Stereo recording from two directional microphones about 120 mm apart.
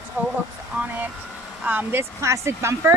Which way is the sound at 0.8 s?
15° right (ahead or behind).